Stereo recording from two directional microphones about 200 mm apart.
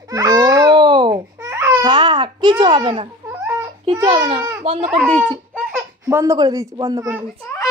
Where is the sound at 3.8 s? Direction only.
25° right (ahead or behind).